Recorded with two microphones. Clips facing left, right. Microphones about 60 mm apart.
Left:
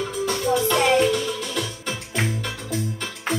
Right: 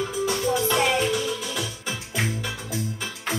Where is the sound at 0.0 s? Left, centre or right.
Centre.